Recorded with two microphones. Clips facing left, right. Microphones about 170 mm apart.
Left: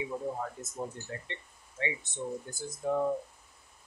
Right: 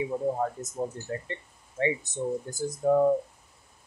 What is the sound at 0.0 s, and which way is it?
Speech, 40° right (ahead or behind).